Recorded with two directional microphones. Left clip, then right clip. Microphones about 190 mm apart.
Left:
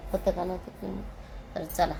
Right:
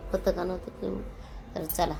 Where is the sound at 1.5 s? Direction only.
15° right (ahead or behind).